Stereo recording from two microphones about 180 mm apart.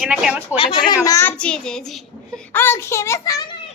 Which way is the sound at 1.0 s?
15° left (ahead or behind).